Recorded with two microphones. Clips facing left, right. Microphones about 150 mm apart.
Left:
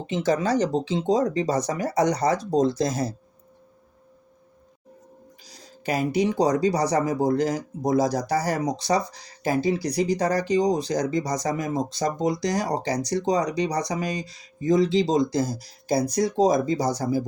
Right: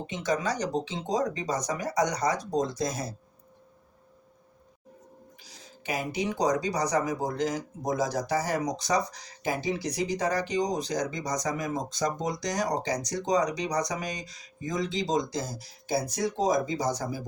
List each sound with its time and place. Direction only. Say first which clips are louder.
0.1 s speech: left 7 dB; 30° left (ahead or behind)
5.4 s speech: left 3 dB; 40° left (ahead or behind)